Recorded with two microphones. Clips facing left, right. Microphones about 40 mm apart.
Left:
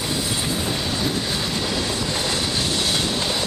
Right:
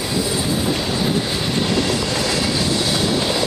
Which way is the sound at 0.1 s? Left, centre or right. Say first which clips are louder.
Right 5 dB; centre.